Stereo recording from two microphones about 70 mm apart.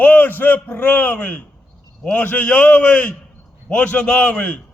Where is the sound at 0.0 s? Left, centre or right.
Left.